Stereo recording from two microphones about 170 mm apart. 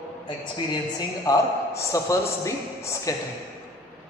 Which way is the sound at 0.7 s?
20° left (ahead or behind).